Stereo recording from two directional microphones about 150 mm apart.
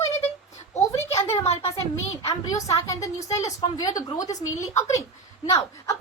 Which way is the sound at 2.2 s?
20° left (ahead or behind).